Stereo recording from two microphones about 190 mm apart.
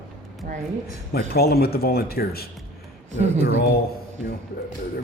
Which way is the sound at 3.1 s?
35° right (ahead or behind).